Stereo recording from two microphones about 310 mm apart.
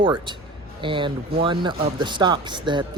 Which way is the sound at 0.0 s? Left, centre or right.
Centre.